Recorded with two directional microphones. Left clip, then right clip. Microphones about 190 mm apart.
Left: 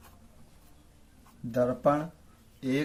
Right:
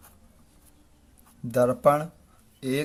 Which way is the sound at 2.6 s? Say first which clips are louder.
Right 2 dB; 30° right (ahead or behind).